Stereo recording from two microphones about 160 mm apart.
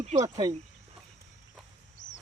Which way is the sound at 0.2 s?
20° right (ahead or behind).